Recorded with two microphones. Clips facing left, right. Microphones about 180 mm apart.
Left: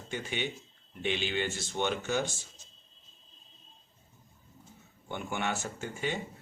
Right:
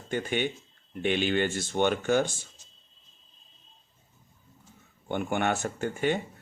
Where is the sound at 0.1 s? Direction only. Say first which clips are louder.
Right 7 dB; 55° right (ahead or behind).